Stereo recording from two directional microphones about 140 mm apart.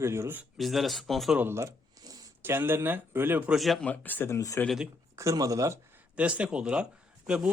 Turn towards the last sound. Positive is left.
turn(degrees=-5)  # may be behind; listen again after turning